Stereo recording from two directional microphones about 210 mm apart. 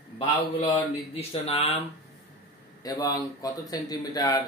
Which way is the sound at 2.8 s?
15° left (ahead or behind).